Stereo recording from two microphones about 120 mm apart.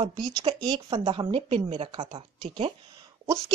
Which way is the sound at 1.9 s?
45° right (ahead or behind).